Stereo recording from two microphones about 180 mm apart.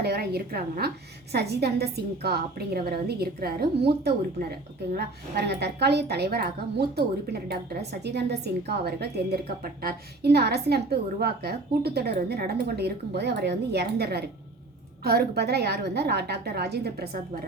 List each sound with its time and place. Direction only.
0.0 s a woman's voice: 65° right (ahead or behind)